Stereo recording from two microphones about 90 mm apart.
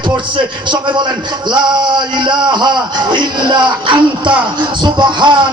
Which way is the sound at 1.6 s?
55° right (ahead or behind).